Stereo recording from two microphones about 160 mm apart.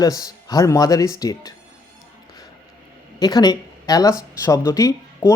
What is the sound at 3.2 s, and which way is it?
Speech, 25° left (ahead or behind).